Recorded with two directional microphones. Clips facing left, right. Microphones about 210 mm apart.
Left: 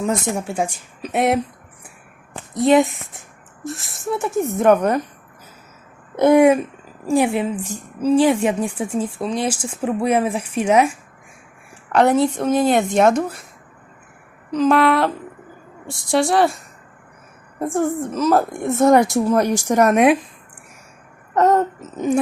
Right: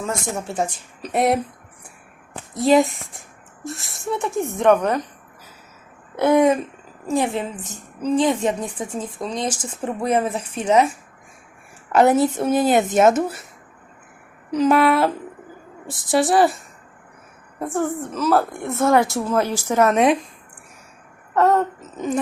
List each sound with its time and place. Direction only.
0.0 s a woman's voice: 15° left (ahead or behind)
2.5 s speech: centre (ahead or behind)
6.1 s a woman's voice: 15° left (ahead or behind)
11.9 s a woman's voice: 5° right (ahead or behind)
14.5 s speech: 5° right (ahead or behind)
17.6 s a woman's voice: 10° left (ahead or behind)
21.3 s babbling: 20° left (ahead or behind)